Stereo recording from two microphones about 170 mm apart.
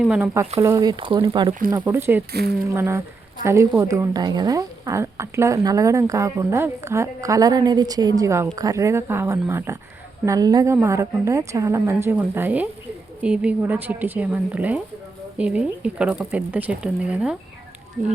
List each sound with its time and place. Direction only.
0.0 s speech: 5° right (ahead or behind)
0.6 s speech: 20° right (ahead or behind)
1.8 s a woman's voice: 15° right (ahead or behind)
2.3 s speech: 70° right (ahead or behind)
2.6 s a woman's voice: 15° right (ahead or behind)